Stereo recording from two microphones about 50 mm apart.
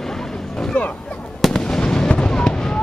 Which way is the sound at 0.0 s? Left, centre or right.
Centre.